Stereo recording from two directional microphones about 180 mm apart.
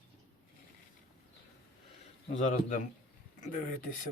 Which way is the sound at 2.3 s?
45° left (ahead or behind).